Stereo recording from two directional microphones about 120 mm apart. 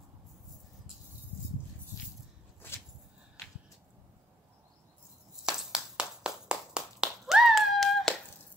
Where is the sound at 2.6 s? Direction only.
20° left (ahead or behind).